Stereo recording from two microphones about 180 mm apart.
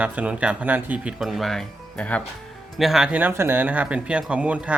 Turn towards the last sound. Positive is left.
turn(degrees=-5)  # may be behind; listen again after turning